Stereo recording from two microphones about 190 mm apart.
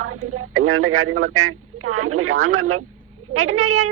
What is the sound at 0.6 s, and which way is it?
A woman's voice, 90° right.